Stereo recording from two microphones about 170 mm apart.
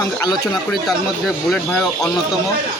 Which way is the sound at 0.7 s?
Centre (ahead or behind).